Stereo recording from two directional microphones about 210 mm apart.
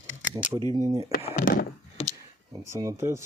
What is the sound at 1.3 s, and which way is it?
Speech, 40° left (ahead or behind).